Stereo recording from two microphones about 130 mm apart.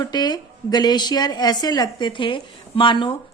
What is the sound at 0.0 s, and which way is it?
A woman's voice, 30° left (ahead or behind).